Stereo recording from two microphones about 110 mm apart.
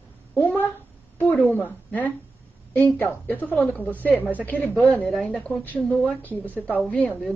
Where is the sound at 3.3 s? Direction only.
15° left (ahead or behind).